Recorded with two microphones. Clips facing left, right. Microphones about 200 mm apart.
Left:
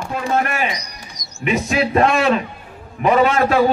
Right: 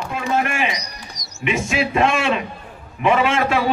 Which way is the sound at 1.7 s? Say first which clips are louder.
Left 3 dB; 45° left (ahead or behind).